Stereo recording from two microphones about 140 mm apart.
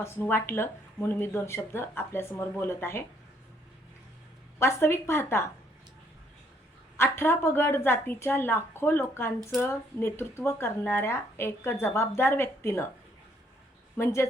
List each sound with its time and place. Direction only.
0.0 s speech: 15° left (ahead or behind)
4.6 s speech: 15° left (ahead or behind)
6.9 s speech: 15° left (ahead or behind)
13.9 s a woman's voice: 20° left (ahead or behind)